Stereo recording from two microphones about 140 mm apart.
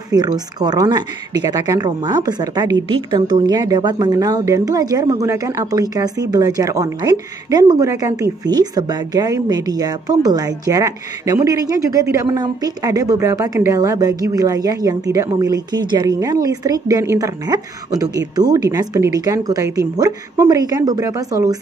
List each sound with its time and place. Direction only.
0.1 s speech: 30° right (ahead or behind)